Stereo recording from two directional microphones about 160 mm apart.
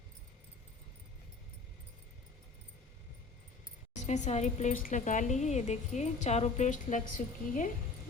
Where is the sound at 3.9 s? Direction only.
45° left (ahead or behind).